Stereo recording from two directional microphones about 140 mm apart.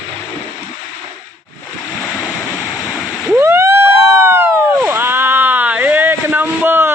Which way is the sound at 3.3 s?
20° right (ahead or behind).